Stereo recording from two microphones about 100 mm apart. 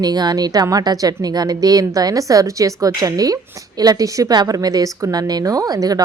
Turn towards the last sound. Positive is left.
turn(degrees=-40)  # may be behind; listen again after turning